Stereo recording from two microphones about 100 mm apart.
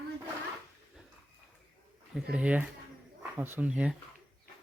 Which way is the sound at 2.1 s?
10° right (ahead or behind).